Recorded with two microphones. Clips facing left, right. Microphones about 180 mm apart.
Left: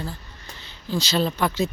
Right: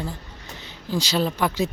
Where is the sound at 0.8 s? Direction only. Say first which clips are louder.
Even; 15° right (ahead or behind).